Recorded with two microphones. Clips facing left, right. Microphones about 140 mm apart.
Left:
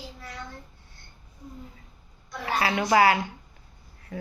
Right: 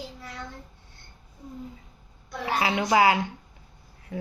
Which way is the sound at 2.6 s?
15° right (ahead or behind).